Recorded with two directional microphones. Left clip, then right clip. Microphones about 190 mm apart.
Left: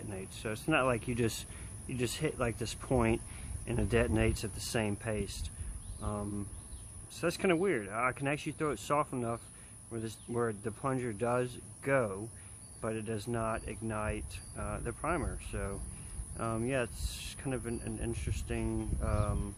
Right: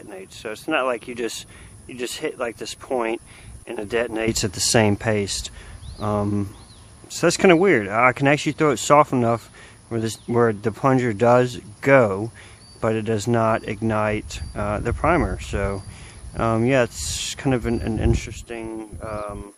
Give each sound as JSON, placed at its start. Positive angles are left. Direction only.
{"t": 0.1, "sound": "speech", "side_deg": -55}